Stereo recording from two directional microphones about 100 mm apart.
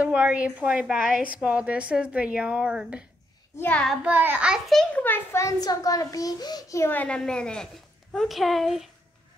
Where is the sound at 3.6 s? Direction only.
15° left (ahead or behind).